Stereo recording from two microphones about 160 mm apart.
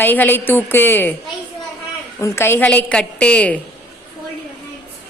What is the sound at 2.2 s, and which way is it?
A woman's voice, 15° left (ahead or behind).